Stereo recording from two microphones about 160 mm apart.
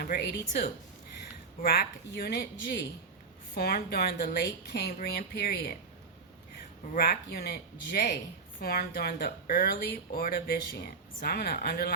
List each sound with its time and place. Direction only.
0.0 s speech: 80° left
1.6 s speech: 75° left (ahead or behind)
3.5 s speech: 75° left (ahead or behind)
6.9 s speech: 70° left (ahead or behind)